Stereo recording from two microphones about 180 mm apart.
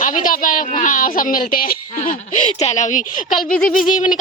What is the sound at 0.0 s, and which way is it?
Speech, 45° left (ahead or behind).